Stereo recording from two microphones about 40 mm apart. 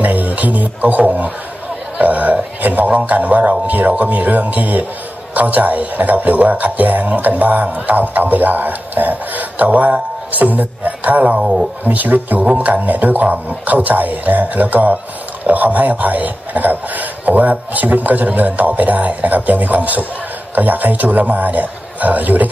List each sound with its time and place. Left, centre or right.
0.0 s music: right
2.0 s speech: right
2.9 s speech: right